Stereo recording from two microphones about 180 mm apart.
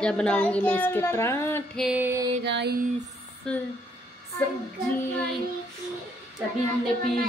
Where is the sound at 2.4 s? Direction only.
70° right (ahead or behind).